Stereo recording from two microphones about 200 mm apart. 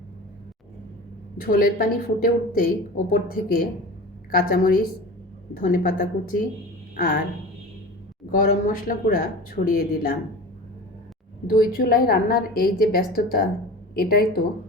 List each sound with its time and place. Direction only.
1.4 s a woman's voice: 45° left (ahead or behind)
8.3 s a woman's voice: 40° left (ahead or behind)
11.4 s a woman's voice: 45° left (ahead or behind)